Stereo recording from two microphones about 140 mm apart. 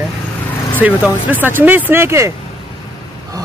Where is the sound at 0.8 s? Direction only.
10° right (ahead or behind).